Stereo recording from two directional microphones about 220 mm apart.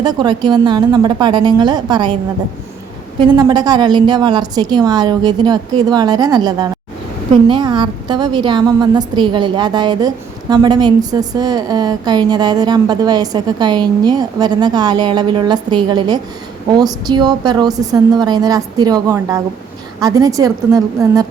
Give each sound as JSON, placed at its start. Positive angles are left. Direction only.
{"t": 0.0, "sound": "a woman's voice", "side_deg": -20}
{"t": 3.2, "sound": "a woman's voice", "side_deg": -20}